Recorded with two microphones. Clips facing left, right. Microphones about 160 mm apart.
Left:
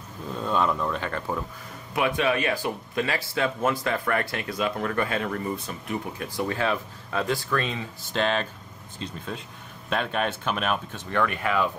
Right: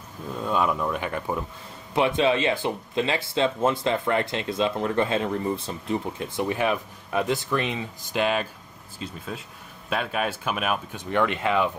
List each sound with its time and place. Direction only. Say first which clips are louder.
0.4 s speech: even; 10° right (ahead or behind)
2.0 s speech: right 3 dB; 25° right (ahead or behind)